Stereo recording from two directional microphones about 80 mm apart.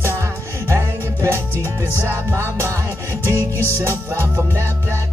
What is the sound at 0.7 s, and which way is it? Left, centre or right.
Music, right.